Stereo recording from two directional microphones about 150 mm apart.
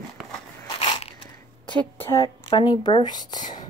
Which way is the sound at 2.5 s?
35° left (ahead or behind).